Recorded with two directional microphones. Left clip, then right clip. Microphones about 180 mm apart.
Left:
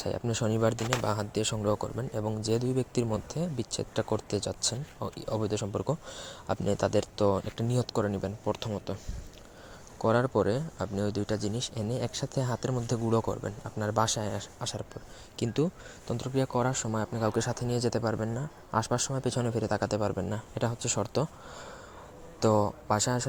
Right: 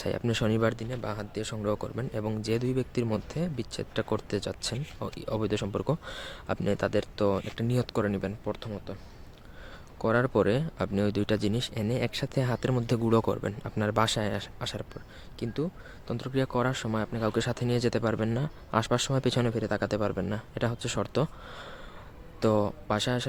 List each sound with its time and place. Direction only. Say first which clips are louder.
0.0 s speech: right 2 dB; 20° right (ahead or behind)
0.7 s speech: left 5 dB; 10° left (ahead or behind)
1.5 s speech: right 1 dB; 5° right (ahead or behind)
2.0 s speech: even; 15° right (ahead or behind)
8.4 s speech: left 3 dB; 5° left (ahead or behind)
10.0 s speech: right 1 dB; 10° right (ahead or behind)
15.4 s speech: left 3 dB; 5° left (ahead or behind)
16.1 s speech: even; 10° right (ahead or behind)